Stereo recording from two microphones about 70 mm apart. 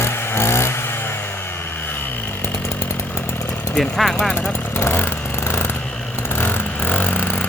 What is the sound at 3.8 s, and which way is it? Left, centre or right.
Speech, centre.